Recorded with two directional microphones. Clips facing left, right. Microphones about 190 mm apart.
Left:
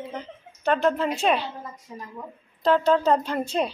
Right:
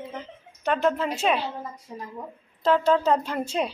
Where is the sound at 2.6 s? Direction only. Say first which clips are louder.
Left 1 dB; 5° right (ahead or behind).